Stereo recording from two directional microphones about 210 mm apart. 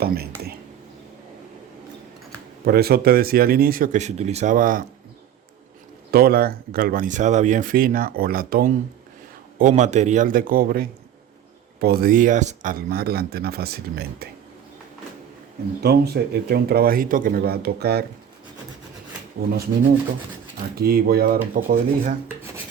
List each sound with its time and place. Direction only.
0.0 s speech: 50° right (ahead or behind)
2.6 s speech: 50° right (ahead or behind)
6.1 s speech: 45° right (ahead or behind)
15.8 s speech: 50° right (ahead or behind)
19.4 s speech: 45° right (ahead or behind)